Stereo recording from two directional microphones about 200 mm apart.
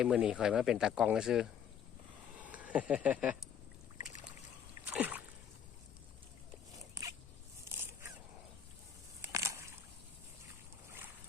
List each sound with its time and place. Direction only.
0.0 s speech: 5° right (ahead or behind)
4.0 s boat: 40° left (ahead or behind)
4.9 s splash: 10° right (ahead or behind)
9.2 s a sound: 15° right (ahead or behind)